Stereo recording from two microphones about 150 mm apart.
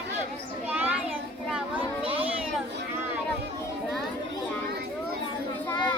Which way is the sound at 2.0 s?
40° right (ahead or behind).